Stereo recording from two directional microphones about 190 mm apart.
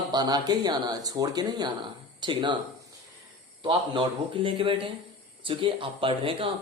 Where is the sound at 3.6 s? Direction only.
25° right (ahead or behind).